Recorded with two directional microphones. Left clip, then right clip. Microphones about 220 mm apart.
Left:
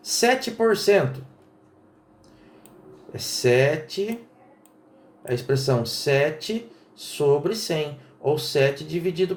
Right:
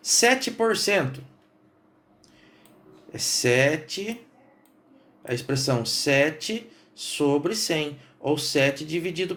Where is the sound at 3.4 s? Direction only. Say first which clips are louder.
Left 2 dB; 35° right (ahead or behind).